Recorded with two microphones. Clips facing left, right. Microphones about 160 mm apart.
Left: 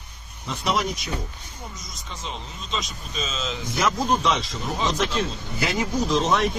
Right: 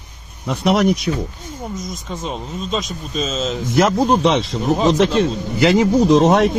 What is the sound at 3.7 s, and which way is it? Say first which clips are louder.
Speech: right 8 dB; 60° right (ahead or behind).